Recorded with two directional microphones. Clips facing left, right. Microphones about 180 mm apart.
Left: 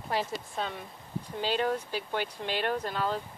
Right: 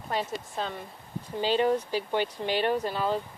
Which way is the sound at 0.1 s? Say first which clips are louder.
Right 1 dB; 5° left (ahead or behind).